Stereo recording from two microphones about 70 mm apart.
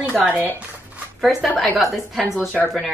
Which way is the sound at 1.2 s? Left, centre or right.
Centre.